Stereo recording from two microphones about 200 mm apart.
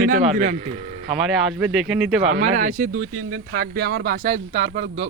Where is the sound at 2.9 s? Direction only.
90° right.